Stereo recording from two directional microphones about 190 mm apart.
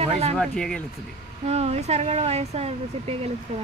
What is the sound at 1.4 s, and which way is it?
Speech, 35° right (ahead or behind).